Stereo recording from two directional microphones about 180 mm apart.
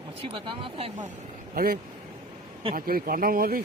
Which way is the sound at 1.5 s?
55° right (ahead or behind).